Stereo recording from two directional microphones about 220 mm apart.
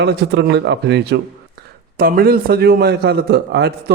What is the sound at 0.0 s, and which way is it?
A man's voice, 50° right (ahead or behind).